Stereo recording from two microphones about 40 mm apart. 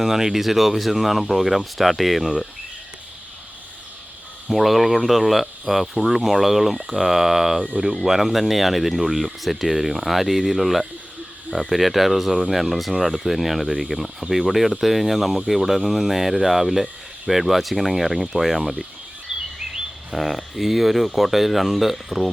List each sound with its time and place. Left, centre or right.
0.0 s speech: centre
4.4 s speech: centre
19.3 s bird vocalization: centre
20.1 s speech: centre